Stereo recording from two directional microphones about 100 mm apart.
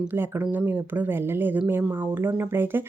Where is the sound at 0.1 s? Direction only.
20° right (ahead or behind).